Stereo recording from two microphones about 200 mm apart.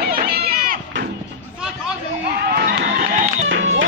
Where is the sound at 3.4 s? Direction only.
70° right (ahead or behind).